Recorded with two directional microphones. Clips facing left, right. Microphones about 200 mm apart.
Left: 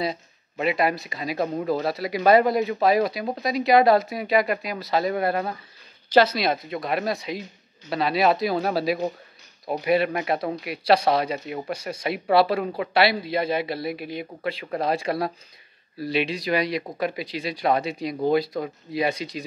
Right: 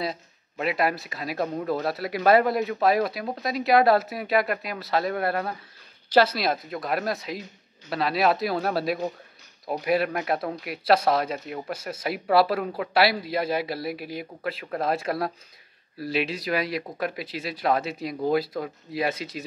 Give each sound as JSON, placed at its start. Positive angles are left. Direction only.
{"t": 0.0, "sound": "speech", "side_deg": 0}